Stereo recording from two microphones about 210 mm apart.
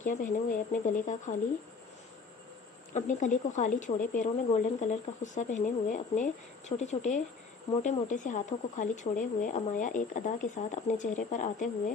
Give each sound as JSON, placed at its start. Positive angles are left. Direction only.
{"t": 0.0, "sound": "speech", "side_deg": 40}
{"t": 2.9, "sound": "speech", "side_deg": 35}